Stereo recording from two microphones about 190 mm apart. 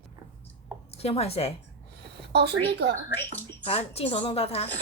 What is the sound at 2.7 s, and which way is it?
Speech, 60° right (ahead or behind).